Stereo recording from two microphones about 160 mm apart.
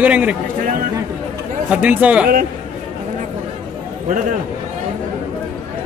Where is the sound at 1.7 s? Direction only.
10° right (ahead or behind).